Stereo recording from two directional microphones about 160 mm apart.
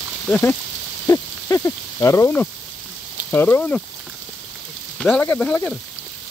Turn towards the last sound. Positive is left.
turn(degrees=5)  # may be behind; listen again after turning